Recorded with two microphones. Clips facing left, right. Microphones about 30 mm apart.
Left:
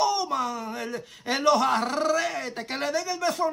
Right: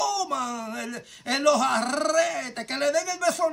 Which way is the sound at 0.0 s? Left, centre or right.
Left.